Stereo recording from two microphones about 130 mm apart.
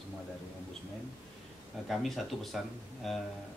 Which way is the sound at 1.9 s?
Centre (ahead or behind).